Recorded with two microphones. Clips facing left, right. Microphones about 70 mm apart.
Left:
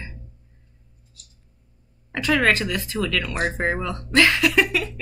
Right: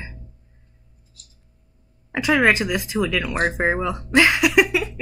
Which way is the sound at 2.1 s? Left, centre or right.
Centre.